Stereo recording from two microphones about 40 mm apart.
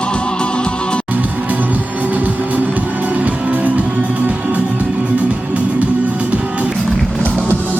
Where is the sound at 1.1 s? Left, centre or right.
Right.